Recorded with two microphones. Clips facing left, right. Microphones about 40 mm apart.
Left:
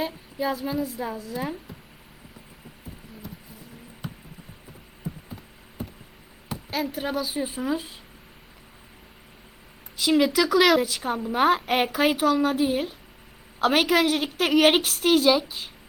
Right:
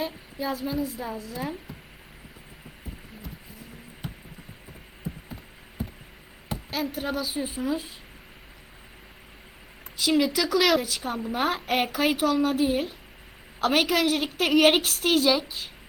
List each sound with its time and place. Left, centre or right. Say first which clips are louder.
0.0 s a woman's voice: left 3 dB; centre
6.7 s a woman's voice: left 2 dB; centre
7.3 s speech: left 2 dB; centre
10.0 s a woman's voice: left 3 dB; centre